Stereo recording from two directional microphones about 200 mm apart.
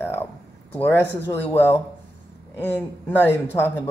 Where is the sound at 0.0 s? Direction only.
10° left (ahead or behind).